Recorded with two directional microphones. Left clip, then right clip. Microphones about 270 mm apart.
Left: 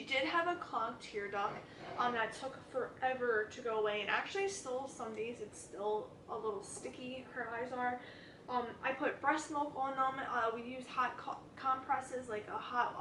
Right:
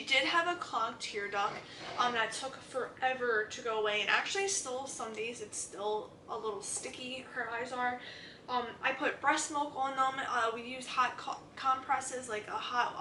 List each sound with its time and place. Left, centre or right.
0.0 s a woman's voice: centre
5.8 s speech: left
6.8 s a woman's voice: centre